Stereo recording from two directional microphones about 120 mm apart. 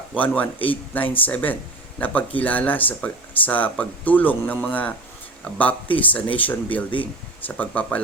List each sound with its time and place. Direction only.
0.2 s speech: 15° left (ahead or behind)